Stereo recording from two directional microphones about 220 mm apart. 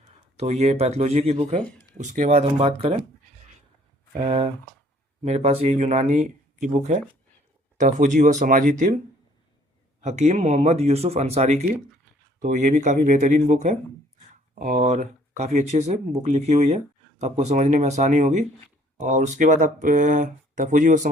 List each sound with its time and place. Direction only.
0.3 s speech: 30° right (ahead or behind)
4.2 s speech: 25° right (ahead or behind)
10.0 s speech: 30° right (ahead or behind)